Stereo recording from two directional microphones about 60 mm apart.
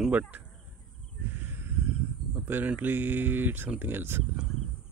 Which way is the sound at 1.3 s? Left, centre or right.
Right.